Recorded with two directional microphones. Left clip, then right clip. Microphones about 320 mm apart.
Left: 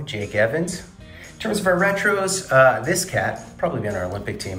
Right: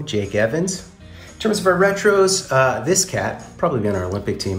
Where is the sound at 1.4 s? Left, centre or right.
Centre.